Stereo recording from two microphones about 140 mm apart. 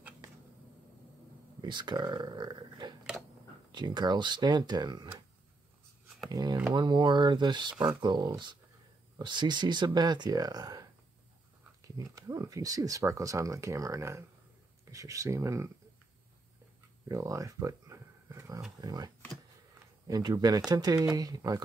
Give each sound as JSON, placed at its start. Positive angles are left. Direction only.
{"t": 1.6, "sound": "speech", "side_deg": -30}
{"t": 6.3, "sound": "speech", "side_deg": -30}
{"t": 12.0, "sound": "speech", "side_deg": -25}
{"t": 17.1, "sound": "a sound", "side_deg": -25}
{"t": 18.8, "sound": "speech", "side_deg": -25}